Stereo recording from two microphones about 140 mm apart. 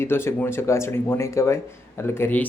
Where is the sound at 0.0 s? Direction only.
15° left (ahead or behind).